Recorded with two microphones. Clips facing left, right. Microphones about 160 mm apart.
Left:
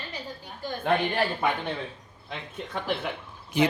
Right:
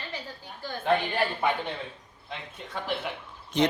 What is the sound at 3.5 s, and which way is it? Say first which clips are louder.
Speech: left 1 dB; 10° left (ahead or behind).